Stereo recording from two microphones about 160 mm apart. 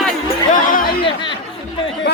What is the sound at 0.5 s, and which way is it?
Chatter, 60° left (ahead or behind).